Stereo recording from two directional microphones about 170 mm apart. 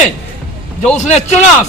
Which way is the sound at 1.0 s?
45° left (ahead or behind).